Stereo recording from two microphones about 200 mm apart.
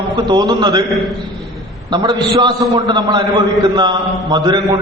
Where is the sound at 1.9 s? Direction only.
20° right (ahead or behind).